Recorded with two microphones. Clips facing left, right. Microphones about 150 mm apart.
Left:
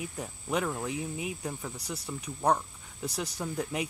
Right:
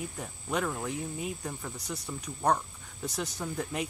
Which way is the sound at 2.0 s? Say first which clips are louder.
Left 1 dB; 10° left (ahead or behind).